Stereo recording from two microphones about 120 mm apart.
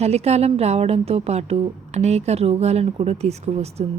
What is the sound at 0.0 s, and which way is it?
A woman's voice, 60° right (ahead or behind).